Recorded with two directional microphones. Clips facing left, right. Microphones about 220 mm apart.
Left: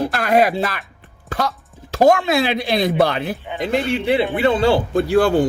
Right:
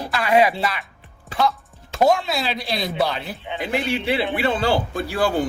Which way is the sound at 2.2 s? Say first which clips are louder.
Left 7 dB; 55° left (ahead or behind).